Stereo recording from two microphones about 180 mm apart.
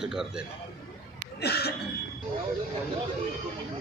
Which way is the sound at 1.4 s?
65° left (ahead or behind).